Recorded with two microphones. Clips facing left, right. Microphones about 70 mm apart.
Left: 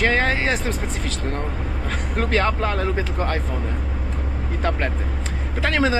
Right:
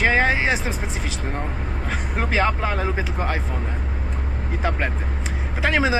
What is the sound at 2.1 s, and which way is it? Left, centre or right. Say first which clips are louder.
Speech: left 1 dB; centre.